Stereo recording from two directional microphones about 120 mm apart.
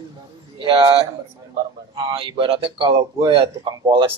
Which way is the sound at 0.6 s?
45° right (ahead or behind).